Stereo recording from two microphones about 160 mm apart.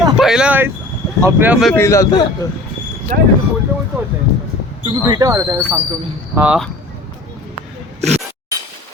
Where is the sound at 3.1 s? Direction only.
60° right (ahead or behind).